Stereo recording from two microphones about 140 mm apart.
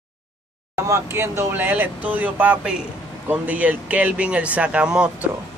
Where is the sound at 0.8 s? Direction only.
20° right (ahead or behind).